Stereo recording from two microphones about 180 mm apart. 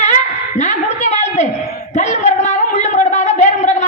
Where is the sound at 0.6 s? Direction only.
40° left (ahead or behind).